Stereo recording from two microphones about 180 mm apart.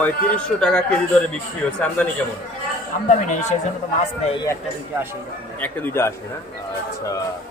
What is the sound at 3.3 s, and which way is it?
Speech, 40° left (ahead or behind).